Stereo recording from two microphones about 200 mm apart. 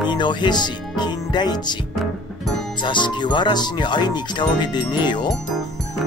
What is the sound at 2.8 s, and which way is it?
Speech, 25° left (ahead or behind).